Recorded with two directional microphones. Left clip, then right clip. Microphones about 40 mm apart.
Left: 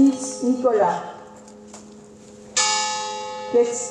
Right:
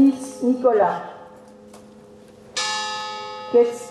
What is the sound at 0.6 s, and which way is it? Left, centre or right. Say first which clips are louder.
Speech: right 1 dB; right.